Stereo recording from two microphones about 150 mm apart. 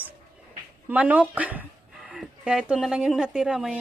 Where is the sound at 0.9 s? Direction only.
10° right (ahead or behind).